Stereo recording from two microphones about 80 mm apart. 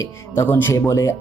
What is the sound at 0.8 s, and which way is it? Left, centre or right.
Speech, left.